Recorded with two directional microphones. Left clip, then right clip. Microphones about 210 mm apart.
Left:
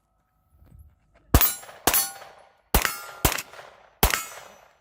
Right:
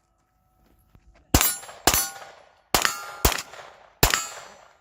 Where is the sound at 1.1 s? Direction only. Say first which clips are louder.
Right 2 dB; 5° left (ahead or behind).